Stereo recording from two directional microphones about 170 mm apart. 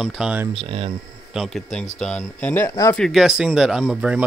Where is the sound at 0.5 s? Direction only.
35° right (ahead or behind).